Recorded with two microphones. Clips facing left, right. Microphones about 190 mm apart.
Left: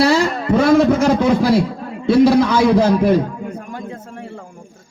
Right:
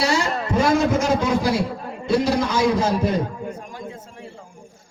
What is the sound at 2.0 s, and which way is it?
A man's voice, 65° left (ahead or behind).